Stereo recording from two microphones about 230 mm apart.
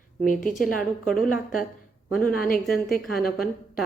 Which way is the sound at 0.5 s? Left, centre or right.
Centre.